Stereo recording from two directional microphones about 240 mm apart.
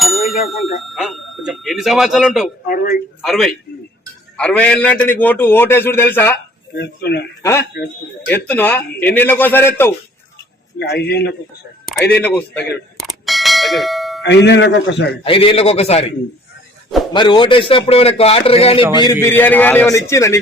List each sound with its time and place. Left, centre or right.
0.0 s speech: centre
2.6 s a man's voice: left
3.2 s a man's voice: centre
6.7 s a man's voice: left
7.4 s a man's voice: centre
10.8 s a man's voice: left
11.9 s bell: centre
14.3 s a man's voice: left
15.2 s a man's voice: left
17.2 s a man's voice: centre
19.2 s a man's voice: centre